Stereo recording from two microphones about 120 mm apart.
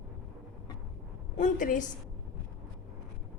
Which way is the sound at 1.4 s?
90° left.